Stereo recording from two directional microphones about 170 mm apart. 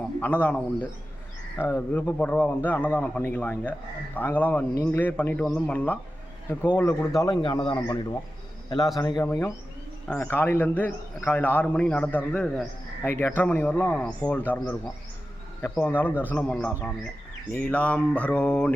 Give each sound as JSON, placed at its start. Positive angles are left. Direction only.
{"t": 0.2, "sound": "a man's voice", "side_deg": 10}
{"t": 7.2, "sound": "a man's voice", "side_deg": 25}